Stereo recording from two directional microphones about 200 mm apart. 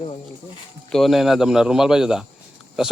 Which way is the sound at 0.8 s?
Centre (ahead or behind).